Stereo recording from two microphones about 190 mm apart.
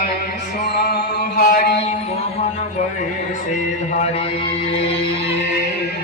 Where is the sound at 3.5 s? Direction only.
40° left (ahead or behind).